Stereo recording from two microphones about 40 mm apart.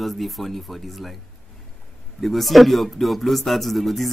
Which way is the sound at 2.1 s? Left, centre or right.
Centre.